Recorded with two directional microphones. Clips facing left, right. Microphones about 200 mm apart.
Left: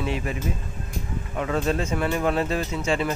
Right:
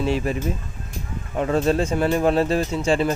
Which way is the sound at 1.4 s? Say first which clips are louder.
Right 5 dB; 35° right (ahead or behind).